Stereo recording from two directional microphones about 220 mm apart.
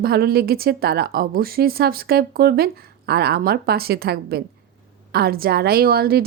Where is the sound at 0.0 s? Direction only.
45° right (ahead or behind).